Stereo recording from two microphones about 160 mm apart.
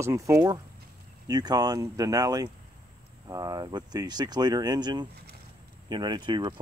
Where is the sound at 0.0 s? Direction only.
20° right (ahead or behind).